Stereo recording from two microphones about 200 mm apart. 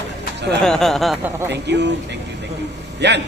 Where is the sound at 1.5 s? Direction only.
60° right (ahead or behind).